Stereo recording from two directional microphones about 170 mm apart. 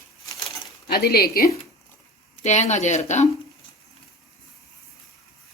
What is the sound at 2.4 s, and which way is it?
Speech, 45° left (ahead or behind).